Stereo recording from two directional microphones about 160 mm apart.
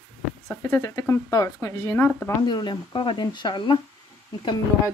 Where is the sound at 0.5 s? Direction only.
15° left (ahead or behind).